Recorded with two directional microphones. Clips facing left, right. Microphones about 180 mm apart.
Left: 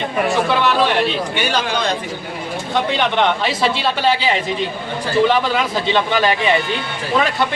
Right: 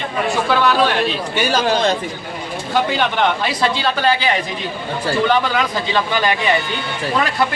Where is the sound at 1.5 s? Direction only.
35° right (ahead or behind).